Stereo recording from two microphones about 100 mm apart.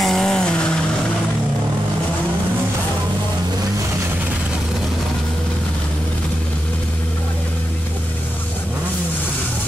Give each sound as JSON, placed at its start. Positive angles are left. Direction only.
{"t": 0.0, "sound": "vehicle", "side_deg": 5}